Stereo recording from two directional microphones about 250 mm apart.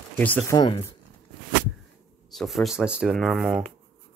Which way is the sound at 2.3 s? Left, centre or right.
Centre.